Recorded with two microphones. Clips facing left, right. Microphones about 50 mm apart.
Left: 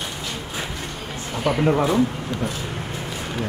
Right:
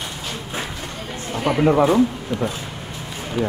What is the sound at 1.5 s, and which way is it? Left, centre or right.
Speech, centre.